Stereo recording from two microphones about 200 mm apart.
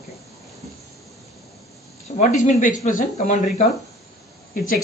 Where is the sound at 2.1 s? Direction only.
40° left (ahead or behind).